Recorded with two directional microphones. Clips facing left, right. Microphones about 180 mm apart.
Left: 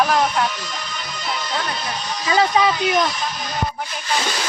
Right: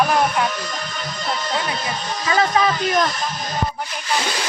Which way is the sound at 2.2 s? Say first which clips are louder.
Left 1 dB; 15° left (ahead or behind).